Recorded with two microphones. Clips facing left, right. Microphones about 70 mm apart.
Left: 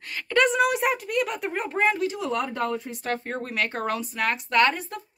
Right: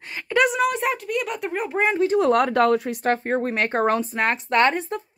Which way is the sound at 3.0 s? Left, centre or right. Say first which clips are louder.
Right 8 dB; right.